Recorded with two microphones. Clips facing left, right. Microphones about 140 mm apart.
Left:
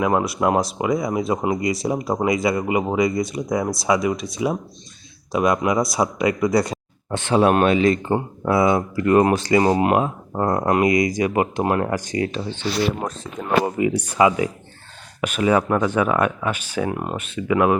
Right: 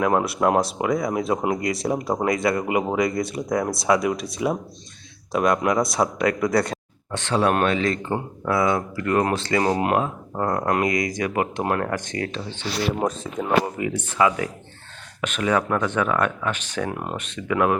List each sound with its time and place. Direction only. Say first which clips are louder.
0.0 s speech: left 1 dB; centre (ahead or behind)
10.9 s speech: left 5 dB; 50° right (ahead or behind)
11.2 s speech: left 4 dB; 10° left (ahead or behind)
13.0 s speech: right 4 dB; 5° right (ahead or behind)
13.7 s speech: left 6 dB; 10° left (ahead or behind)